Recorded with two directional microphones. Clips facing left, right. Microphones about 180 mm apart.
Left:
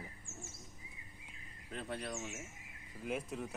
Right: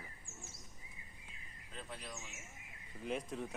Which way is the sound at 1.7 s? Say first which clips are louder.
Left 7 dB; 60° left (ahead or behind).